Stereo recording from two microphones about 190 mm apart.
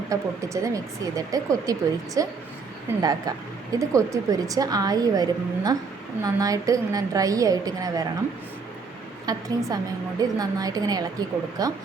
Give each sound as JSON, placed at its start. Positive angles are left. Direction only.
{"t": 0.1, "sound": "speech", "side_deg": -15}
{"t": 9.2, "sound": "speech", "side_deg": -20}